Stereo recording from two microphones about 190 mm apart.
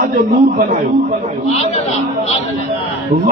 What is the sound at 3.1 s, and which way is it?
Speech, 45° right (ahead or behind).